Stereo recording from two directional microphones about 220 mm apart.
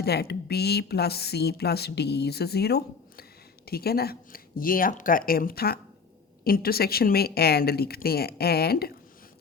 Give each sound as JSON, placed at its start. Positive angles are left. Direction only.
{"t": 0.0, "sound": "speech", "side_deg": 45}